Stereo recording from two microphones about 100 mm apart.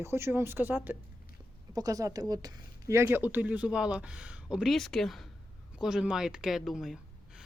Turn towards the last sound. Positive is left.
turn(degrees=0)  # may be behind; listen again after turning